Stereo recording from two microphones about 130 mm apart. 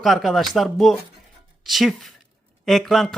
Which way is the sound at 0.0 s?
Centre (ahead or behind).